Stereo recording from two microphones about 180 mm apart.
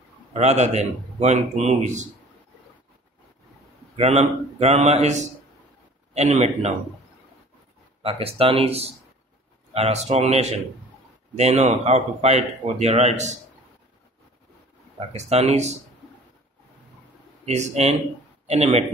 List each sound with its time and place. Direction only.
0.3 s speech: 40° right (ahead or behind)
3.9 s speech: 35° right (ahead or behind)
8.0 s speech: 30° right (ahead or behind)
15.1 s speech: 35° right (ahead or behind)
17.5 s speech: 35° right (ahead or behind)